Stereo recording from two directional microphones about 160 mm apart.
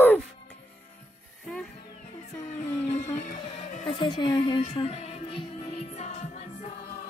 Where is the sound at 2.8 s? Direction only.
45° left (ahead or behind).